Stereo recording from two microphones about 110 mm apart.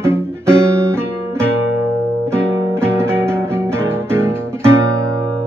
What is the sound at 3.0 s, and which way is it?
Music, 20° right (ahead or behind).